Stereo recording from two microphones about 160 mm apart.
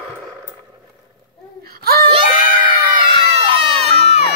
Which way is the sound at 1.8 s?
70° right (ahead or behind).